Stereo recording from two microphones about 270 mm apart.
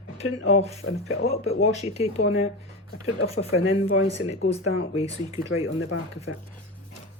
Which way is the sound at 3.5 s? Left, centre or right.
Left.